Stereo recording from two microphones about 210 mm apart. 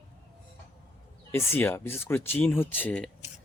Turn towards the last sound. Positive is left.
turn(degrees=5)  # may be behind; listen again after turning